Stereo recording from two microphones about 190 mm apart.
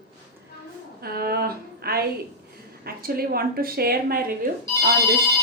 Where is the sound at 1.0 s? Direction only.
55° right (ahead or behind).